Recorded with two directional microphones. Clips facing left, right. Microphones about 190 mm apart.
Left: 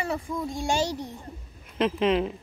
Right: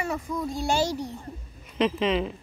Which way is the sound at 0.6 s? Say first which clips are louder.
Right 1 dB; 20° left (ahead or behind).